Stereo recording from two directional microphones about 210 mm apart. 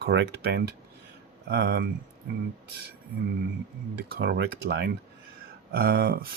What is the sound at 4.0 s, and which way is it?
Speech, 50° right (ahead or behind).